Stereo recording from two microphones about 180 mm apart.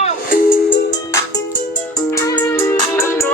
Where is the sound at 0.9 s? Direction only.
20° left (ahead or behind).